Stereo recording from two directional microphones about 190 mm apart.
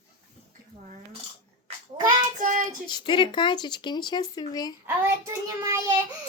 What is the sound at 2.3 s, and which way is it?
Child singing, 45° right (ahead or behind).